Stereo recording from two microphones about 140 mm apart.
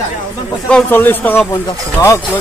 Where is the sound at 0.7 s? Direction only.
15° left (ahead or behind).